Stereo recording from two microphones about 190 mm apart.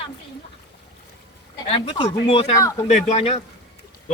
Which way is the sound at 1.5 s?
25° left (ahead or behind).